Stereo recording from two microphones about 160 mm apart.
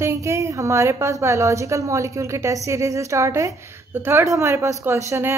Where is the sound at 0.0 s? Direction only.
20° right (ahead or behind).